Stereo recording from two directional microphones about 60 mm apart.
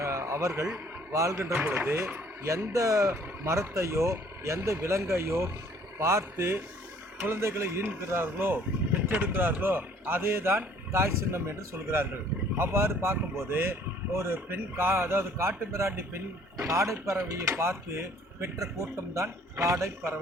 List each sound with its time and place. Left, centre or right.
0.0 s a sound: right
1.1 s speech: right
1.5 s speech: right
2.7 s speech: right